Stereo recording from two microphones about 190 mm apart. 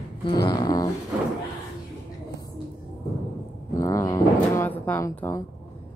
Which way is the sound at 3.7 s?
15° left (ahead or behind).